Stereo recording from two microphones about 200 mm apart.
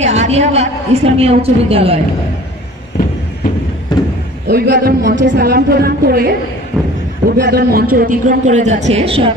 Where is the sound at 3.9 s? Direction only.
20° left (ahead or behind).